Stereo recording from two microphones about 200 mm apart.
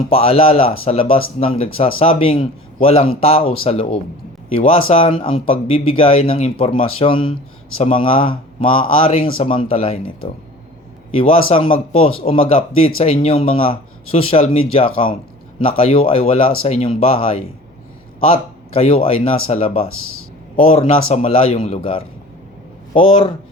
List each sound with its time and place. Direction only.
0.1 s a man's voice: 30° left (ahead or behind)
19.9 s speech: 90° left
20.6 s a man's voice: 30° left (ahead or behind)